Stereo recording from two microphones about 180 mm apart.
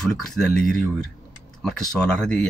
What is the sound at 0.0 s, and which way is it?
Speech, centre (ahead or behind).